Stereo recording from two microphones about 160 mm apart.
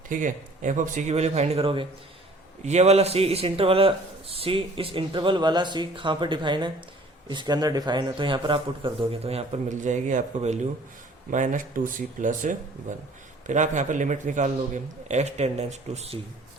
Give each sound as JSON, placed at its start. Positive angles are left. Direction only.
{"t": 0.1, "sound": "speech", "side_deg": -55}
{"t": 2.6, "sound": "a man's voice", "side_deg": -45}